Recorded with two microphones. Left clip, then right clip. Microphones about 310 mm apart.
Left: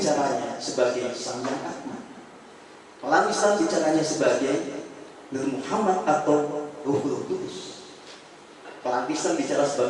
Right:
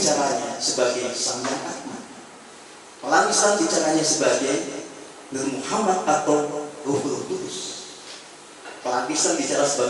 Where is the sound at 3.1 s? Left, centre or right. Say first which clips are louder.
Right 2 dB; centre; by 7.3 s left.